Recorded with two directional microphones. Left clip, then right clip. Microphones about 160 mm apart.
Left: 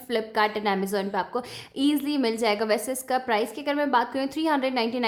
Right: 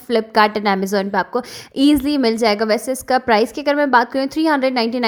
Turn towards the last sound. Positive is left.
turn(degrees=-40)  # may be behind; listen again after turning